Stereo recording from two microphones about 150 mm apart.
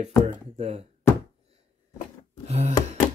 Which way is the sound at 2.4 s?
45° right (ahead or behind).